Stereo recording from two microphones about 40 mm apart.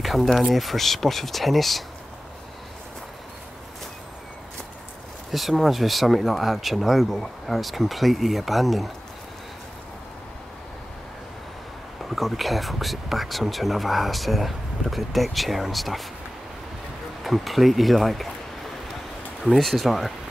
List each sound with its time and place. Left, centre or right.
0.0 s speech: centre
5.3 s speech: centre
12.2 s speech: centre
17.2 s speech: centre
19.4 s speech: centre